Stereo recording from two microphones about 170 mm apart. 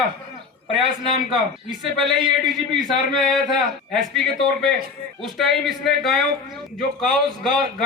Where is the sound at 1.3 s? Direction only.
Centre (ahead or behind).